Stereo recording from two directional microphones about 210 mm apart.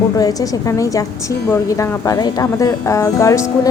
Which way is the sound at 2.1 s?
15° left (ahead or behind).